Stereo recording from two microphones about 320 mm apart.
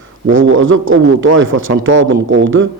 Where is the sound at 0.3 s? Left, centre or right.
Right.